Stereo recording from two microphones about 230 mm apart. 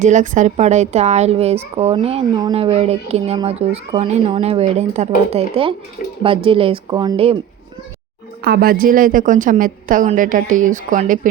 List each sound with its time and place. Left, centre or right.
0.0 s speech: right
8.4 s a woman's voice: right